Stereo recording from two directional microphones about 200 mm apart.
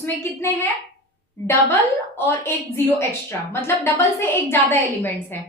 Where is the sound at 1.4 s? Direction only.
10° left (ahead or behind).